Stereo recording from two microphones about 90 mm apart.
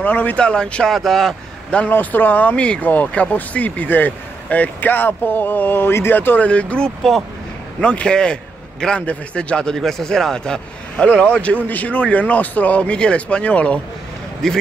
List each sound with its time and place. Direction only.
0.0 s a man's voice: 20° left (ahead or behind)